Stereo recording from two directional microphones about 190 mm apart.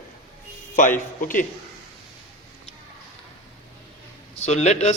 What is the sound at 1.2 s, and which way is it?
Speech, 45° left (ahead or behind).